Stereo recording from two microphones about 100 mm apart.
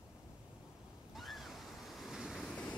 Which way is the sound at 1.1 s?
Centre (ahead or behind).